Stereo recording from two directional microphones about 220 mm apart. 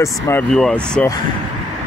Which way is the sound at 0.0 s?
10° left (ahead or behind).